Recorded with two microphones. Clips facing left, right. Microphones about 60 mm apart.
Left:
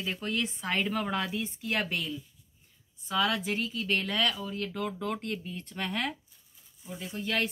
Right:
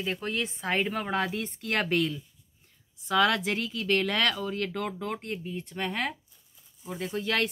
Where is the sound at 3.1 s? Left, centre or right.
Right.